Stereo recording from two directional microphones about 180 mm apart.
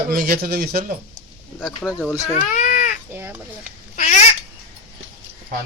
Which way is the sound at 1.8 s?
5° left (ahead or behind).